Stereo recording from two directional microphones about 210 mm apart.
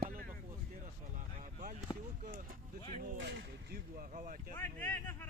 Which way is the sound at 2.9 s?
40° right (ahead or behind).